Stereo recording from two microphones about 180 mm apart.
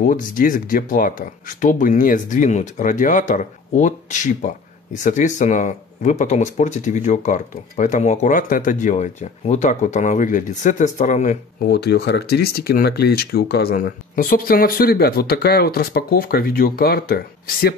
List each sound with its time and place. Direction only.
0.0 s speech: 50° left (ahead or behind)
11.6 s speech: 65° left (ahead or behind)